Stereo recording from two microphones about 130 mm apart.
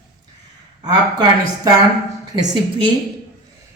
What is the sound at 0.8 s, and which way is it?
A woman's voice, 35° right (ahead or behind).